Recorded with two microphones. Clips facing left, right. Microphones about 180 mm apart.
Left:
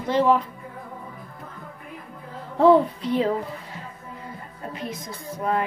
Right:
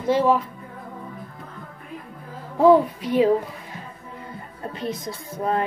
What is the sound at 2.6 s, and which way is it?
A child's voice, 10° right (ahead or behind).